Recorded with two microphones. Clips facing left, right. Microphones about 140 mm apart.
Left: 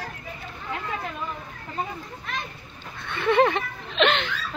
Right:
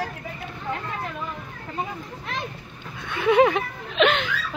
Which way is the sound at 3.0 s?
10° right (ahead or behind).